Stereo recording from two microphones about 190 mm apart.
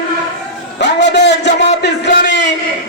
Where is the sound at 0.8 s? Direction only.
65° left (ahead or behind).